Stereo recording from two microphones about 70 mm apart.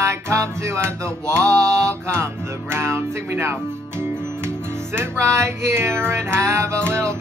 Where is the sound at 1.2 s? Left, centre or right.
Centre.